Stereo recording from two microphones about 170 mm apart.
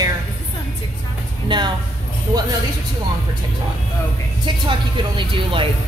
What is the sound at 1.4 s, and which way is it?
Speech, 25° right (ahead or behind).